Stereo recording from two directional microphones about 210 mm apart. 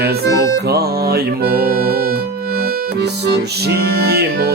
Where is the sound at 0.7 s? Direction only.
45° right (ahead or behind).